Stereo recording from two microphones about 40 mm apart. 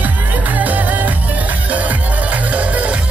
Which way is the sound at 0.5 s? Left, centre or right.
Right.